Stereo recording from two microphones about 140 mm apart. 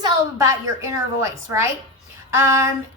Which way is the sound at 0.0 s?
25° right (ahead or behind).